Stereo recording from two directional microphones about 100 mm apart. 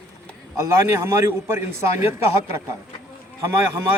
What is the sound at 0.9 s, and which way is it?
Speech, 25° right (ahead or behind).